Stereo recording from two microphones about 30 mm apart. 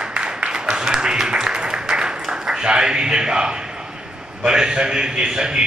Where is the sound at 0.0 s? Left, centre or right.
Right.